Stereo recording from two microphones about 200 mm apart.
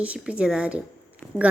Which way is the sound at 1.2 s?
10° left (ahead or behind).